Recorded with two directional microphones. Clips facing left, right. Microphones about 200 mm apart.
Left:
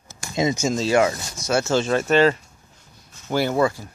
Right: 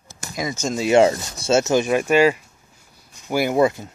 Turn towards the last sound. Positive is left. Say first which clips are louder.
# right 2 dB
turn(degrees=-20)  # may be behind; listen again after turning